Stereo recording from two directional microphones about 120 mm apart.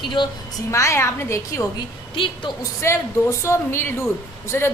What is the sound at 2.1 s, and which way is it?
Speech, 45° left (ahead or behind).